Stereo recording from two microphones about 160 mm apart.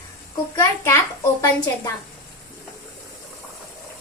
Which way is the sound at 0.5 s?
15° left (ahead or behind).